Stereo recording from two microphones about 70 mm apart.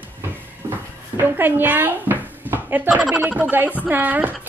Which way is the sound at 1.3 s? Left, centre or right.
Right.